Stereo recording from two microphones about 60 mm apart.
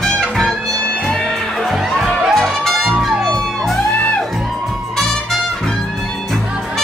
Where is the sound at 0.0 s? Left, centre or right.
Centre.